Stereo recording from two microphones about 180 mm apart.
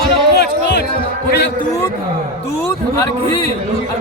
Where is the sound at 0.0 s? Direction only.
65° left (ahead or behind).